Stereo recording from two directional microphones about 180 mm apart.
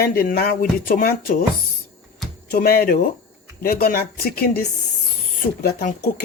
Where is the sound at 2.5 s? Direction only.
60° left (ahead or behind).